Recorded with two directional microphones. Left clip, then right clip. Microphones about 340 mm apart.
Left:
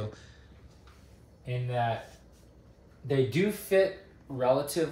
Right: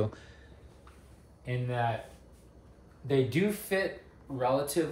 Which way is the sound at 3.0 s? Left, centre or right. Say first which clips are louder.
Left 1 dB; centre.